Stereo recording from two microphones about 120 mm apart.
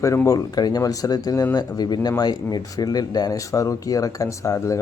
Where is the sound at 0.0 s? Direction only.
25° left (ahead or behind).